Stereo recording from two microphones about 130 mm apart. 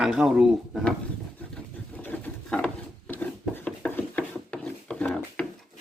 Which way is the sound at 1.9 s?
15° left (ahead or behind).